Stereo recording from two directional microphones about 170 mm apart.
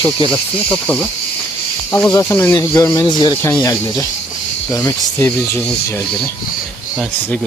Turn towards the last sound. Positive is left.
turn(degrees=15)  # may be behind; listen again after turning